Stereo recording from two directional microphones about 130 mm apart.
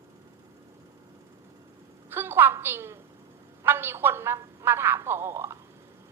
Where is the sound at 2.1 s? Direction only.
15° right (ahead or behind).